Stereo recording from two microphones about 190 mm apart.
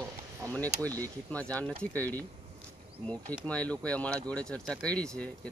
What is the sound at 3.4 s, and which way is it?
A man's voice, 5° left (ahead or behind).